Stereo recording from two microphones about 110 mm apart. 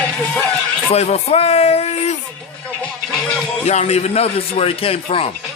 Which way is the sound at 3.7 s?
80° left.